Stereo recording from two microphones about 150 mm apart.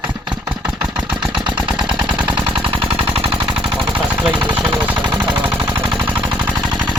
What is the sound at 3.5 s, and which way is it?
Machine gun, 35° right (ahead or behind).